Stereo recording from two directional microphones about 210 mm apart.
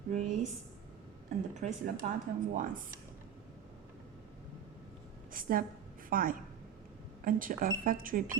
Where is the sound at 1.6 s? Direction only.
35° right (ahead or behind).